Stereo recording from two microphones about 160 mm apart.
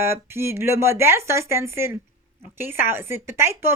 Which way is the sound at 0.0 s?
15° right (ahead or behind).